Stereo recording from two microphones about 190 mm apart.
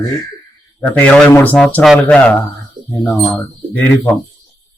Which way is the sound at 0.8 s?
5° left (ahead or behind).